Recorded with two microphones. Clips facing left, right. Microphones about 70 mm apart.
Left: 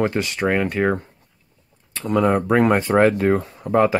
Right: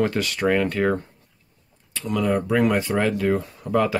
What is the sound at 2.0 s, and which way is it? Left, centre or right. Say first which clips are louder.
Speech: left 4 dB; left.